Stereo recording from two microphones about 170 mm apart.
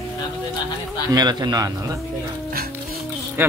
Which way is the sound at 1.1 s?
25° right (ahead or behind).